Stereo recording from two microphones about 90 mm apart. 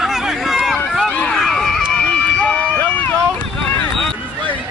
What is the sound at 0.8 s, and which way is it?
Run, 5° left (ahead or behind).